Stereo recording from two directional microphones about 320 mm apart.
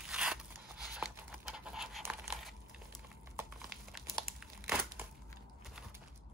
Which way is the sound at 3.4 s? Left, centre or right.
Centre.